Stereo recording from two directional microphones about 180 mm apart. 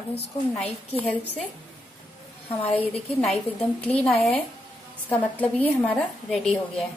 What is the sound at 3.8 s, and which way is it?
A woman's voice, 5° left (ahead or behind).